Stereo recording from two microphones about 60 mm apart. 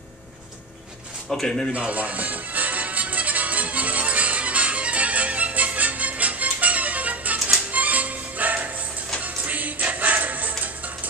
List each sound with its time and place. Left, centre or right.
1.3 s speech: centre
1.7 s music: right